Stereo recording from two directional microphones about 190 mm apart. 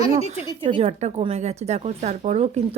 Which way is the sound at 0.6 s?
30° right (ahead or behind).